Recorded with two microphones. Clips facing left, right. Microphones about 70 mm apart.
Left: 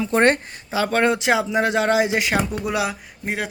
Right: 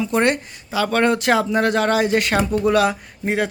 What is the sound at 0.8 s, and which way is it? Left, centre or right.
Speech, centre.